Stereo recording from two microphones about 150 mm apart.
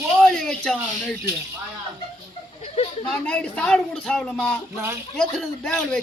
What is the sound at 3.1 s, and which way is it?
A man's voice, 10° left (ahead or behind).